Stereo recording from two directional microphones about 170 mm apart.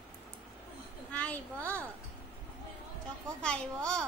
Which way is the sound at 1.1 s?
10° left (ahead or behind).